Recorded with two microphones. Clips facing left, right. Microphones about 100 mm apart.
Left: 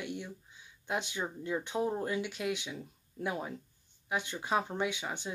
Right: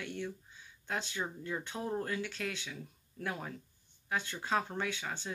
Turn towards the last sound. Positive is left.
turn(degrees=15)  # may be behind; listen again after turning